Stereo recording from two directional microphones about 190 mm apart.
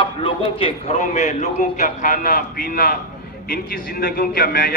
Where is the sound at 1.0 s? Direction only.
40° left (ahead or behind).